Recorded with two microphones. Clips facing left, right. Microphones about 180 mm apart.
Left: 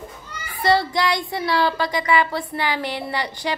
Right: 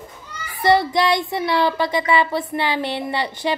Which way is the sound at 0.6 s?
20° right (ahead or behind).